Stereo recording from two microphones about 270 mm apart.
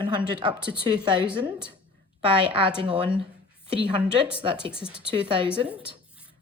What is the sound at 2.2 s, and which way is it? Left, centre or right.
A woman's voice, centre.